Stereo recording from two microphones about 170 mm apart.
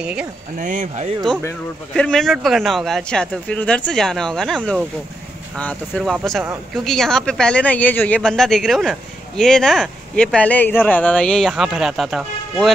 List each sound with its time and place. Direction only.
0.0 s speech: 5° right (ahead or behind)
0.6 s speech: 45° right (ahead or behind)
2.0 s speech: 5° left (ahead or behind)